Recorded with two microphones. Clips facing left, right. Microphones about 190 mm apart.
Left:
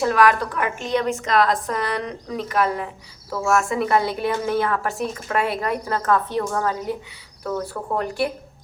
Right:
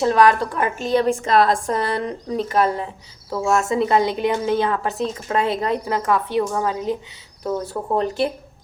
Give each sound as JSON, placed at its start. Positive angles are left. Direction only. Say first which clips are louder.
{"t": 0.0, "sound": "a woman's voice", "louder": "right 2 dB", "side_deg": -25}